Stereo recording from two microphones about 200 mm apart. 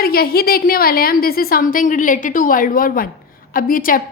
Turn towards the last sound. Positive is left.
turn(degrees=45)  # may be behind; listen again after turning